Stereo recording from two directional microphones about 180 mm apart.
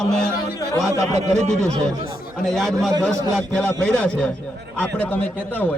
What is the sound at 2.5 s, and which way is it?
A man's voice, centre (ahead or behind).